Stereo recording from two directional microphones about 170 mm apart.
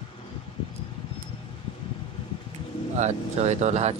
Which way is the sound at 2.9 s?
40° right (ahead or behind).